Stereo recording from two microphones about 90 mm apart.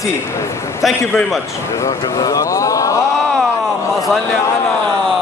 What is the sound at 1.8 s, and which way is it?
Speech, 40° left (ahead or behind).